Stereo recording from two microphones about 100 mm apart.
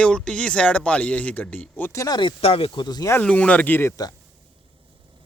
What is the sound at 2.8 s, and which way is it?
Speech, 40° left (ahead or behind).